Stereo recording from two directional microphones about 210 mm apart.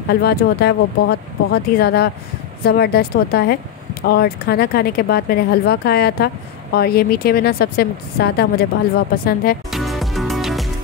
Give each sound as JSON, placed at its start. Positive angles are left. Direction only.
{"t": 0.1, "sound": "speech", "side_deg": 50}
{"t": 9.7, "sound": "music", "side_deg": 0}